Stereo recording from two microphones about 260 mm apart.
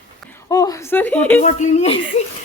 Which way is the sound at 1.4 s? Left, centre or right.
Left.